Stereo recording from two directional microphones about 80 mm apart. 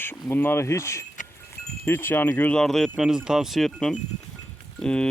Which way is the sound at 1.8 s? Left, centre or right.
Left.